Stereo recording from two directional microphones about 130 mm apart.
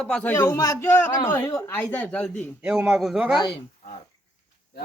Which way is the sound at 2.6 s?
5° right (ahead or behind).